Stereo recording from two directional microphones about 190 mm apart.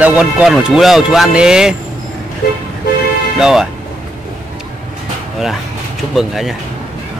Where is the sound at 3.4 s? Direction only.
5° right (ahead or behind).